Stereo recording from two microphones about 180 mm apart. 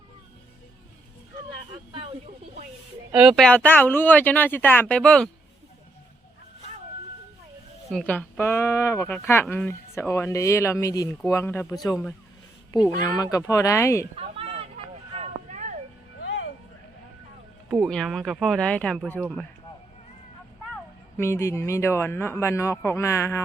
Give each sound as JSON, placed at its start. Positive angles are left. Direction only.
{"t": 3.1, "sound": "speech", "side_deg": -5}
{"t": 7.9, "sound": "speech", "side_deg": 5}
{"t": 11.6, "sound": "speech", "side_deg": 0}
{"t": 12.9, "sound": "speech", "side_deg": 20}
{"t": 14.2, "sound": "fowl", "side_deg": -35}
{"t": 15.1, "sound": "vehicle", "side_deg": -40}
{"t": 17.7, "sound": "speech", "side_deg": 0}
{"t": 21.2, "sound": "speech", "side_deg": 15}